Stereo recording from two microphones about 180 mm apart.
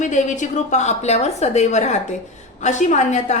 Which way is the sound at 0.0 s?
45° left (ahead or behind).